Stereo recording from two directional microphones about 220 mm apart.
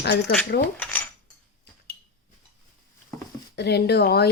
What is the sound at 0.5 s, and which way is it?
Speech, 45° left (ahead or behind).